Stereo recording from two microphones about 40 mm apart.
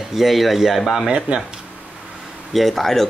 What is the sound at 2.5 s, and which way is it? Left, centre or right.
Speech, centre.